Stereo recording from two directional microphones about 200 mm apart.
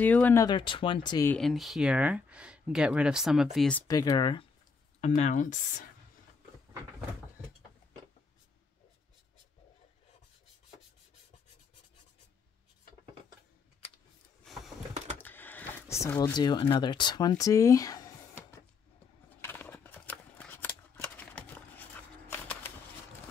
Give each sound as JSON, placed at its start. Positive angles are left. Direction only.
{"t": 0.0, "sound": "speech", "side_deg": 10}
{"t": 1.3, "sound": "speech", "side_deg": 0}
{"t": 3.8, "sound": "speech", "side_deg": 20}
{"t": 5.0, "sound": "speech", "side_deg": 35}
{"t": 14.4, "sound": "a sound", "side_deg": 0}
{"t": 15.1, "sound": "power windows", "side_deg": 10}
{"t": 16.3, "sound": "speech", "side_deg": 20}
{"t": 19.2, "sound": "scissors", "side_deg": 10}